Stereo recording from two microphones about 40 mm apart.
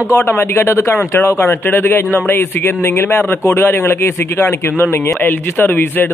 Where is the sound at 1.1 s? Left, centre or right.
Left.